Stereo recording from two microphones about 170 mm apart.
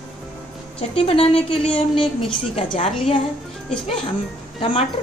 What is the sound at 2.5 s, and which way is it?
Speech, 35° left (ahead or behind).